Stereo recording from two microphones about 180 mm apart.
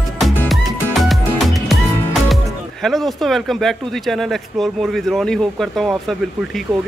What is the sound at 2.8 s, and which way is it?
Speech, centre (ahead or behind).